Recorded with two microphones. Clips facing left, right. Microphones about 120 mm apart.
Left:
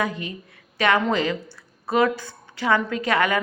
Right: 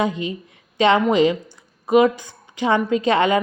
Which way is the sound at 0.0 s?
20° right (ahead or behind).